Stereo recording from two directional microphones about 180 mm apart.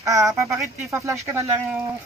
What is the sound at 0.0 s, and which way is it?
Speech, 15° right (ahead or behind).